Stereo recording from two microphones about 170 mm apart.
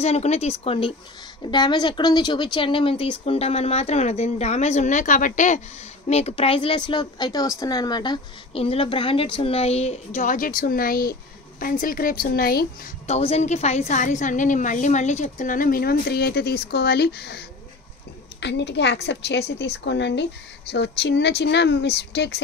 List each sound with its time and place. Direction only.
0.0 s speech: 40° left (ahead or behind); by 12.9 s 60° left (ahead or behind)
13.0 s a woman's voice: 40° left (ahead or behind); by 17.5 s 75° left (ahead or behind)
18.4 s a woman's voice: 85° left